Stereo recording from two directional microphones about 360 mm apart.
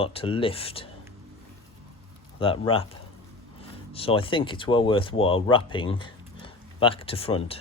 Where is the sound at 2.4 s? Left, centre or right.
Centre.